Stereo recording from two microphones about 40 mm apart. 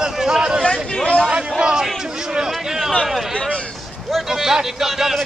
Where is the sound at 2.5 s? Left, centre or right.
Centre.